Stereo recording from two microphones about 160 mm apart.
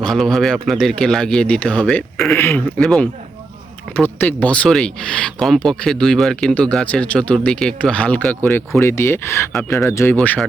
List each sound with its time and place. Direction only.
0.0 s speech: 5° left (ahead or behind)
9.5 s speech: 5° left (ahead or behind)
9.7 s speech: 15° left (ahead or behind)